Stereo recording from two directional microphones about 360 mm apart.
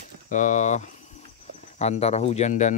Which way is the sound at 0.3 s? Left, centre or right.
Left.